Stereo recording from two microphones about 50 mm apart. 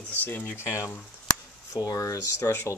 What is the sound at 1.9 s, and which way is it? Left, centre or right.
Speech, left.